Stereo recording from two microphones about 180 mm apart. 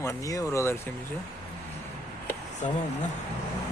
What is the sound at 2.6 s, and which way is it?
Speech, 40° left (ahead or behind).